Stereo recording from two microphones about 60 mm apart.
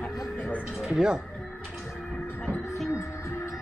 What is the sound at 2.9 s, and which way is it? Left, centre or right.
Music, left.